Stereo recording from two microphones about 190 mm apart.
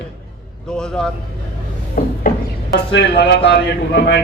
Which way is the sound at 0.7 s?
5° left (ahead or behind).